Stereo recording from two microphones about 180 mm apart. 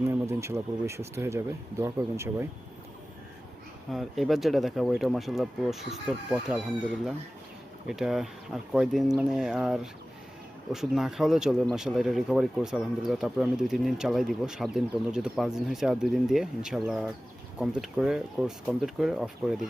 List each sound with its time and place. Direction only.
0.0 s speech: 15° right (ahead or behind)
3.9 s speech: centre (ahead or behind)
7.9 s speech: centre (ahead or behind)